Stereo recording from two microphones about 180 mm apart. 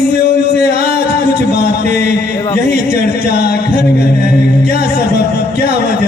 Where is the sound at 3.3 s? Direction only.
65° left (ahead or behind).